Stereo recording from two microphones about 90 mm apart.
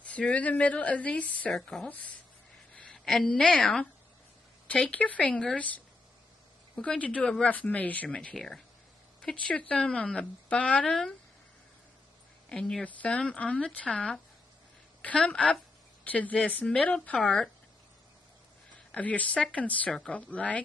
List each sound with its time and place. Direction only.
0.0 s a woman's voice: 15° left (ahead or behind)
1.9 s a woman's voice: 15° left (ahead or behind)
12.4 s a woman's voice: 10° left (ahead or behind)
18.9 s a woman's voice: 15° left (ahead or behind)